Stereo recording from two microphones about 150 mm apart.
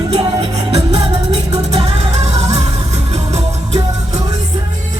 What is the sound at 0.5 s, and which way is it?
Music, 45° right (ahead or behind).